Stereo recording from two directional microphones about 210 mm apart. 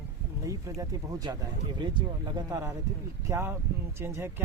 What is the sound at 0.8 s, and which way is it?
Speech, 15° right (ahead or behind).